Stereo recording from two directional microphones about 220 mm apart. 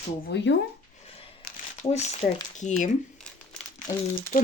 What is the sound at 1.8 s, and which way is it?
Speech, 30° left (ahead or behind).